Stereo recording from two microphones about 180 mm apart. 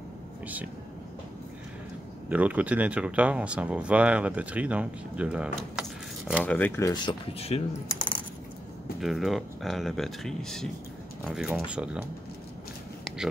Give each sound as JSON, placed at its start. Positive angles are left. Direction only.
{"t": 2.2, "sound": "speech", "side_deg": -10}
{"t": 6.4, "sound": "speech", "side_deg": 10}
{"t": 9.0, "sound": "speech", "side_deg": 0}